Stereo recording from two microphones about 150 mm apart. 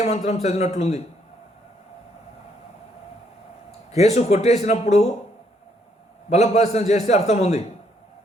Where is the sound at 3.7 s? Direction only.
45° left (ahead or behind).